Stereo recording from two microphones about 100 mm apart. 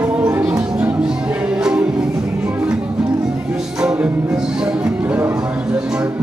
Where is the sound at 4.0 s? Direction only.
5° right (ahead or behind).